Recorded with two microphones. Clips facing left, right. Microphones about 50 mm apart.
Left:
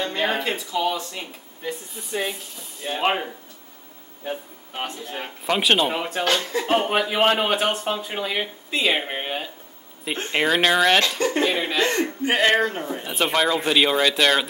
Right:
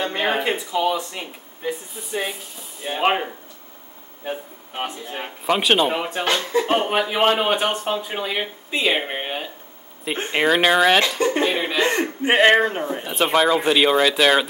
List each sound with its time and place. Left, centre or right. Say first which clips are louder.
0.0 s speech: right 2 dB; centre
2.0 s speech: right 1 dB; centre
11.9 s speech: right 3 dB; right
13.0 s speech: right 3 dB; centre